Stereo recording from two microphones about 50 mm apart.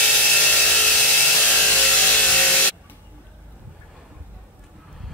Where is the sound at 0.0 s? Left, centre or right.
Centre.